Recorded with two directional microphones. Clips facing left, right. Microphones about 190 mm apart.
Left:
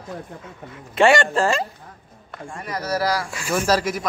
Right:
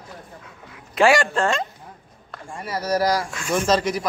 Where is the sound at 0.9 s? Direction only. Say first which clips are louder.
Left 1 dB; centre (ahead or behind).